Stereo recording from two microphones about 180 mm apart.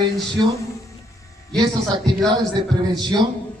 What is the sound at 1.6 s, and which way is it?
Speech, 25° right (ahead or behind).